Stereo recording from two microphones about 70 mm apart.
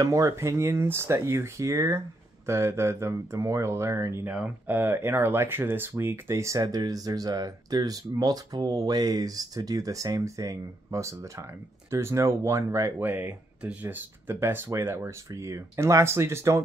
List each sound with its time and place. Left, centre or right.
0.0 s speech: right
4.3 s speech: right
13.0 s speech: right